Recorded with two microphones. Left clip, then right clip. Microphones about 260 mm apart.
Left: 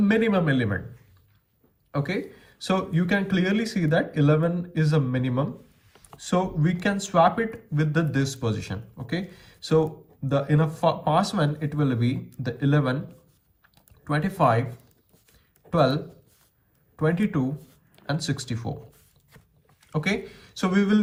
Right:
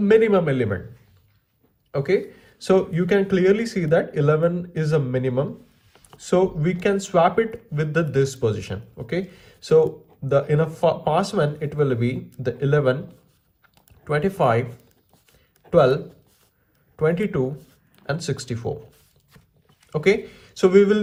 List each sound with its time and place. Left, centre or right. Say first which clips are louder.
0.0 s speech: right 7 dB; right
2.6 s speech: right 7 dB; right
5.5 s a sound: right 1 dB; centre
6.1 s speech: right 6 dB; right
14.1 s speech: right 3 dB; right
15.7 s speech: right 6 dB; right
17.6 s a sound: right 1 dB; centre
18.0 s speech: right 3 dB; right
19.9 s speech: right 8 dB; right